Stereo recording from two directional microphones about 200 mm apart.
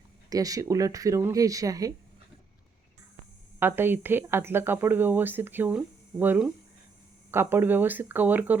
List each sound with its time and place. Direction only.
0.3 s a woman's voice: 15° right (ahead or behind)
3.6 s a woman's voice: 10° right (ahead or behind)